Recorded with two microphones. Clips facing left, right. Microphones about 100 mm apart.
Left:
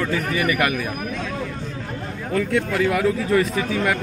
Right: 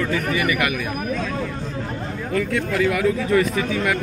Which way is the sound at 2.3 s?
25° left (ahead or behind).